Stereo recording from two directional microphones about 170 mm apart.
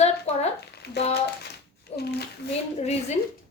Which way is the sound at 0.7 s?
75° left (ahead or behind).